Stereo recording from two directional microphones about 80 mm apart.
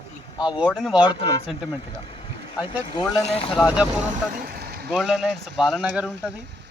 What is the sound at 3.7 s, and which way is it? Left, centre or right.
Speech, centre.